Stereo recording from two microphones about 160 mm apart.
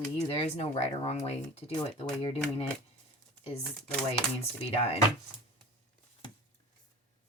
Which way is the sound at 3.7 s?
5° left (ahead or behind).